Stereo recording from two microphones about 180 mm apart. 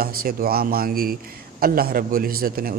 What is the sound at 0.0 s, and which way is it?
A man's voice, 55° right (ahead or behind).